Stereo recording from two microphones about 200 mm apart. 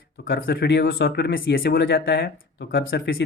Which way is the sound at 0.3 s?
50° left (ahead or behind).